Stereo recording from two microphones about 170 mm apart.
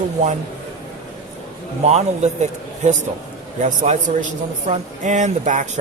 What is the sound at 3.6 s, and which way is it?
Speech, 45° right (ahead or behind).